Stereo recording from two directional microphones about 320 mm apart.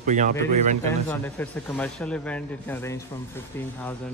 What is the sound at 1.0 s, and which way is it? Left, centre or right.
Speech, centre.